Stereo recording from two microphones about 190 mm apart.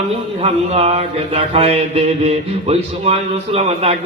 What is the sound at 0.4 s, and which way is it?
A man's voice, 35° right (ahead or behind).